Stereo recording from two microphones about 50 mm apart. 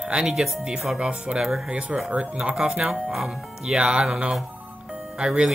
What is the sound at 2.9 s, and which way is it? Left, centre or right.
Speech, centre.